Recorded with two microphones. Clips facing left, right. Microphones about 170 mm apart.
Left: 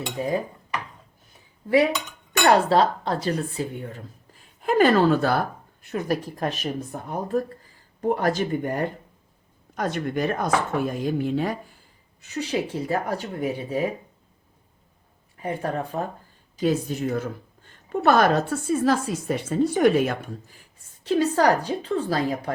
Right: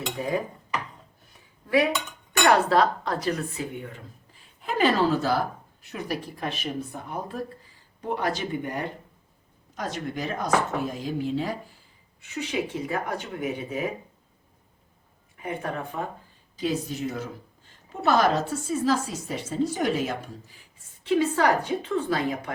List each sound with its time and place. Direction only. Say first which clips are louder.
2.4 s speech: left 2 dB; 30° left (ahead or behind)
4.6 s speech: left 5 dB; 50° left (ahead or behind)
12.2 s speech: left 3 dB; 35° left (ahead or behind)
15.4 s speech: left 4 dB; 35° left (ahead or behind)
16.6 s speech: left 4 dB; 50° left (ahead or behind)
21.0 s speech: left 2 dB; 40° left (ahead or behind)